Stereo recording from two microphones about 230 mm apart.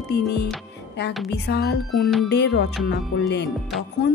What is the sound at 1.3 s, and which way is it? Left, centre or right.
Music, left.